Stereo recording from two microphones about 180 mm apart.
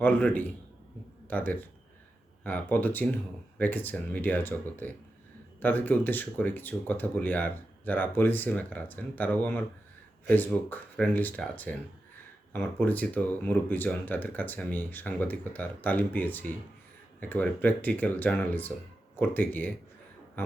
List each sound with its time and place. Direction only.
0.0 s speech: 10° left (ahead or behind)